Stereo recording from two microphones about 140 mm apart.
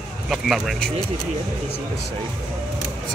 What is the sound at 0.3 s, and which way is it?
Speech, centre (ahead or behind).